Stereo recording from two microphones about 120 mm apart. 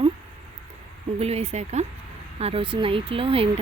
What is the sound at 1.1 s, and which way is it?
Speech, 60° right (ahead or behind).